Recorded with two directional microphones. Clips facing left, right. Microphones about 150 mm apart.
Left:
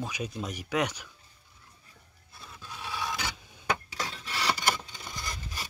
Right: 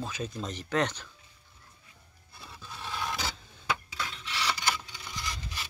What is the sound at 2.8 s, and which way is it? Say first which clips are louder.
Filing: even; 10° left (ahead or behind).